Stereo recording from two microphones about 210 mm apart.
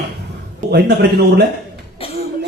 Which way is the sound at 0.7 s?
50° right (ahead or behind).